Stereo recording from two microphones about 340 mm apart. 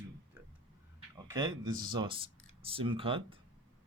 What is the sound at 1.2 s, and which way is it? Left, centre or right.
Speech, centre.